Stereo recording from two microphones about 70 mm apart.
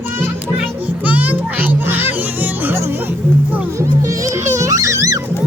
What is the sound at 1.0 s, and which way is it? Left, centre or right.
Music, right.